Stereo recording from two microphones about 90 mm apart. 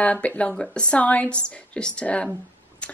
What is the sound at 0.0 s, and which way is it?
A woman's voice, 15° left (ahead or behind).